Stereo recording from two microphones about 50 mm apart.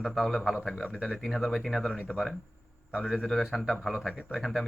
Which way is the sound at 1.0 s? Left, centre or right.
Centre.